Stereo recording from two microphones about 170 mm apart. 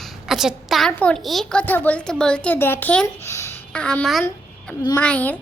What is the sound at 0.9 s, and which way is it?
A woman's voice, 5° left (ahead or behind).